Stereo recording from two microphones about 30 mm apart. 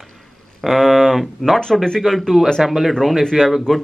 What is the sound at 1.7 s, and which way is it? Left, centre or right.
Speech, left.